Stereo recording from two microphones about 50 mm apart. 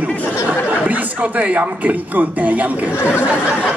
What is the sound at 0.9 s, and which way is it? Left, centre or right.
A woman's voice, right.